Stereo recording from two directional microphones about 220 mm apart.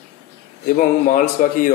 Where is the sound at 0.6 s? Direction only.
35° left (ahead or behind).